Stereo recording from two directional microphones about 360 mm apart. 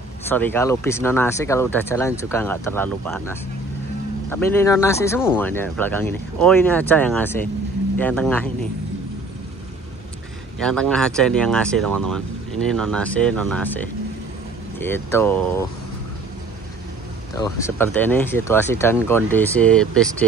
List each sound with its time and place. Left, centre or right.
0.3 s speech: centre
10.6 s speech: centre
11.9 s speech: right
12.6 s speech: centre
17.4 s speech: centre